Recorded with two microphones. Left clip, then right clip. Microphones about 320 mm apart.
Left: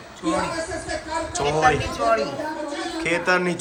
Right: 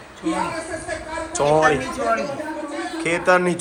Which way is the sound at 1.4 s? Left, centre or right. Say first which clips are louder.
Right 7 dB; centre.